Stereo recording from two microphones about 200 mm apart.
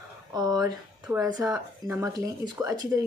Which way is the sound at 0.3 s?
20° right (ahead or behind).